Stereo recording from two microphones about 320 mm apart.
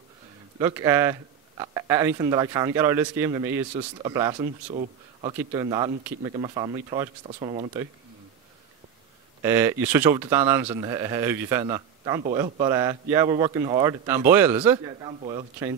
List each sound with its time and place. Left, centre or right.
0.6 s speech: centre
9.4 s speech: centre